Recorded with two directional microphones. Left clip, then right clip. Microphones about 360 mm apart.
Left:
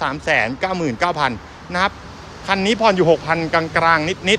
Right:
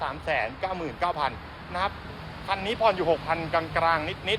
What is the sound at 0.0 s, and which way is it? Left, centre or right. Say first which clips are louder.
Speech: left 10 dB; left.